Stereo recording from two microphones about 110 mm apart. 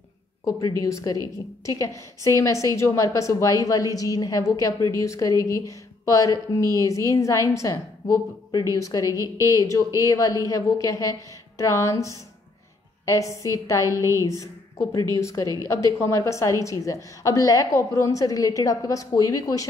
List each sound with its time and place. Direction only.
0.5 s a woman's voice: 30° left (ahead or behind)
13.8 s a woman's voice: 30° right (ahead or behind)
14.2 s a woman's voice: 30° left (ahead or behind)